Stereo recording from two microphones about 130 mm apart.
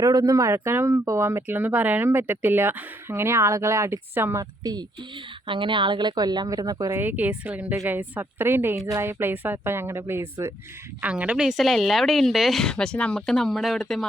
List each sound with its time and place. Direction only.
0.0 s speech: 30° right (ahead or behind)
4.6 s speech: 30° right (ahead or behind)
7.0 s a woman's voice: 15° right (ahead or behind); by 14.1 s 5° left (ahead or behind)